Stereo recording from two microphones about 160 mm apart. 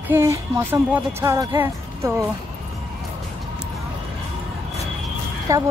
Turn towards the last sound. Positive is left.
turn(degrees=-20)  # may be behind; listen again after turning